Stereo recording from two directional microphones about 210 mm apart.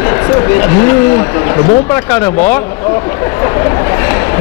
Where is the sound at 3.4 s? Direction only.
20° left (ahead or behind).